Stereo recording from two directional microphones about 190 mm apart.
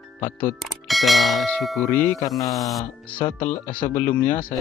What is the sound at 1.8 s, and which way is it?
Speech, 10° left (ahead or behind).